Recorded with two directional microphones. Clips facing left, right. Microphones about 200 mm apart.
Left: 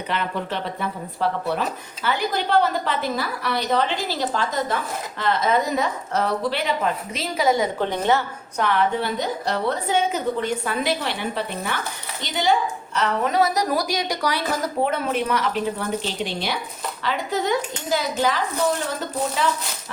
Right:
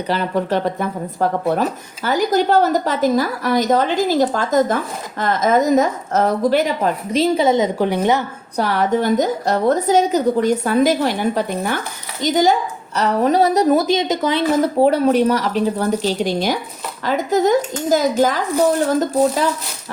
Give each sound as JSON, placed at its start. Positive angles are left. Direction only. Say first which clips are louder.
{"t": 0.1, "sound": "a woman's voice", "louder": "right 8 dB", "side_deg": -40}
{"t": 7.1, "sound": "a woman's voice", "louder": "right 8 dB", "side_deg": -30}
{"t": 7.8, "sound": "a woman's voice", "louder": "right 4 dB", "side_deg": -10}
{"t": 8.5, "sound": "a woman's voice", "louder": "right 4 dB", "side_deg": -40}